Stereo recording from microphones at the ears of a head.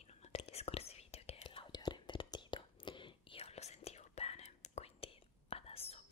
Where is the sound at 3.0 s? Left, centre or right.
Left.